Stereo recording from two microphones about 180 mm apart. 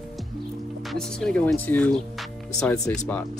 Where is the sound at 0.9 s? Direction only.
Centre (ahead or behind).